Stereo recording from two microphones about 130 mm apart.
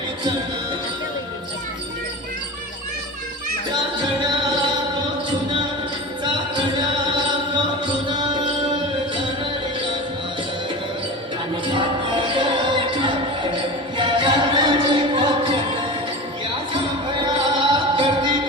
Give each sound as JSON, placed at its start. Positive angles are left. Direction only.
{"t": 6.2, "sound": "music", "side_deg": -35}
{"t": 11.6, "sound": "music", "side_deg": -40}
{"t": 17.2, "sound": "music", "side_deg": -35}